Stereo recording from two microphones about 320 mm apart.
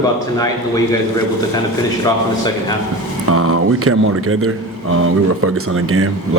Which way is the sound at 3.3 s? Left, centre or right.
Right.